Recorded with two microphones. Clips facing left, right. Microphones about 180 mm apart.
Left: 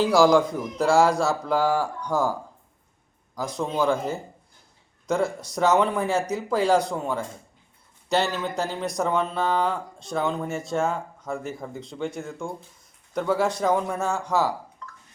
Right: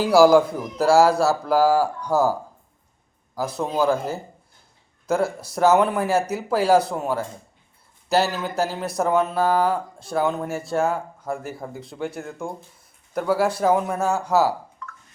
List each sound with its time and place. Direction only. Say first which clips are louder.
0.0 s speech: right 3 dB; 5° right (ahead or behind)
3.3 s speech: right 2 dB; 5° right (ahead or behind)
14.8 s a sound: right 3 dB; 35° left (ahead or behind)